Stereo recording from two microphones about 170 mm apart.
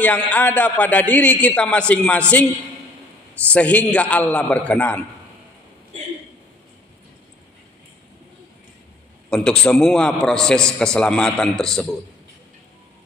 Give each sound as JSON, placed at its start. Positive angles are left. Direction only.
{"t": 0.0, "sound": "a man's voice", "side_deg": 10}
{"t": 3.4, "sound": "a man's voice", "side_deg": 5}
{"t": 9.3, "sound": "a man's voice", "side_deg": 5}